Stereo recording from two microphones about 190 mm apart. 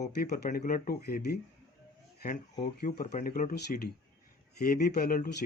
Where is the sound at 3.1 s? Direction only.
45° left (ahead or behind).